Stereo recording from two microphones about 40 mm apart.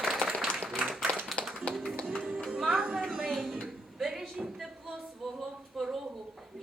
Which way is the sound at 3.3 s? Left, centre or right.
Centre.